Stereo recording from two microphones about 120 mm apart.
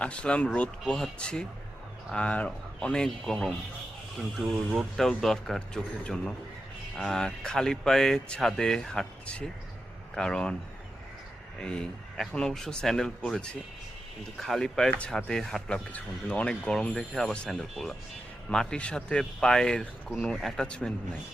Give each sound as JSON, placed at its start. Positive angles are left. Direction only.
{"t": 0.0, "sound": "speech", "side_deg": 10}
{"t": 11.6, "sound": "speech", "side_deg": 5}